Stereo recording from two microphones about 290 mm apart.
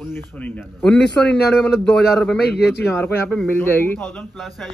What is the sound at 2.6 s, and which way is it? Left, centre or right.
Speech, left.